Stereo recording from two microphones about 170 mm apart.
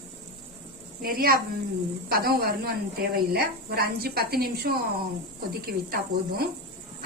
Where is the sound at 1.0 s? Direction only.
60° right (ahead or behind).